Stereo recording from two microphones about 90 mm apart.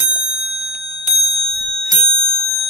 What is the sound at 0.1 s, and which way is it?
Clock, 10° right (ahead or behind).